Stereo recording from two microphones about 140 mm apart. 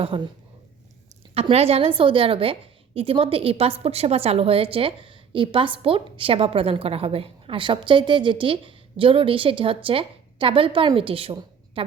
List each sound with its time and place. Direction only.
0.1 s a woman's voice: 40° right (ahead or behind)
1.3 s a woman's voice: 45° right (ahead or behind)